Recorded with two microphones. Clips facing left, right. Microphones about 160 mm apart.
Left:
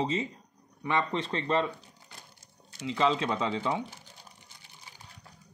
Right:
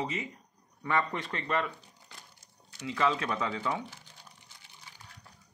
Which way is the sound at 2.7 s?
25° left (ahead or behind).